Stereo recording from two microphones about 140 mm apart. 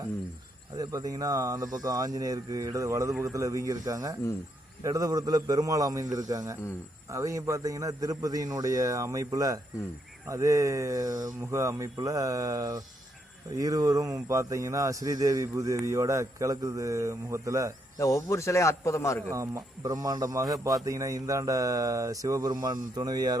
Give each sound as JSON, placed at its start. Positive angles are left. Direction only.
{"t": 0.8, "sound": "speech", "side_deg": -25}
{"t": 17.9, "sound": "speech", "side_deg": 25}
{"t": 19.3, "sound": "speech", "side_deg": -20}